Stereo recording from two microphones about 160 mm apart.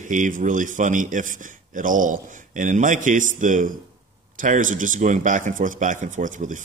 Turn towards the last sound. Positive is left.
turn(degrees=-50)  # may be behind; listen again after turning